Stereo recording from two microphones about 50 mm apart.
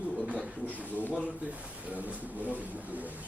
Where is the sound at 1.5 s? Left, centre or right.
Right.